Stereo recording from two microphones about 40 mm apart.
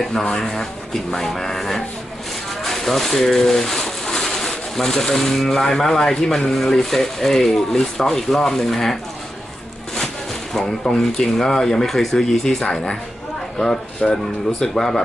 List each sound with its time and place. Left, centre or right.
0.0 s speech: centre
2.6 s a sound: centre
4.4 s speech: centre
10.5 s speech: centre
14.0 s speech: centre